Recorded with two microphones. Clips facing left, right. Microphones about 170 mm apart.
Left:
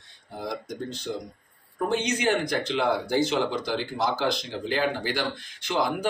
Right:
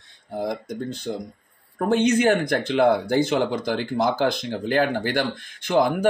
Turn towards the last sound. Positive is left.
turn(degrees=-50)  # may be behind; listen again after turning